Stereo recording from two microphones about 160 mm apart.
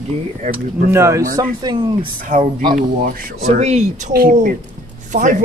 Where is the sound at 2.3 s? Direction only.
55° right (ahead or behind).